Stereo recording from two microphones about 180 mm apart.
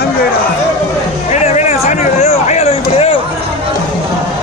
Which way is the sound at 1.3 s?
40° left (ahead or behind).